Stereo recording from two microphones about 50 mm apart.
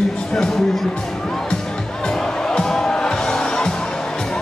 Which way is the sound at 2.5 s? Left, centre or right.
Centre.